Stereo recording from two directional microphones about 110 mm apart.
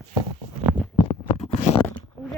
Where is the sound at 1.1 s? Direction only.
85° left.